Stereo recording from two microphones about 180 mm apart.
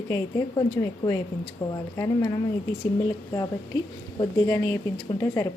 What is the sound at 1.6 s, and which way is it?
Speech, 30° left (ahead or behind).